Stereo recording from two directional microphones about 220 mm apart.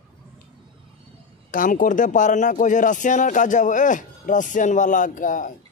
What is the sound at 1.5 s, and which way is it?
Speech, 40° left (ahead or behind).